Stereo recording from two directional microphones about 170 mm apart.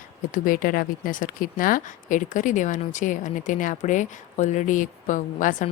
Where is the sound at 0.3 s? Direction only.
55° left (ahead or behind).